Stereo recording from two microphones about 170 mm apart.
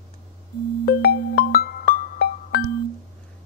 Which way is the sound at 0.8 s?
65° left (ahead or behind).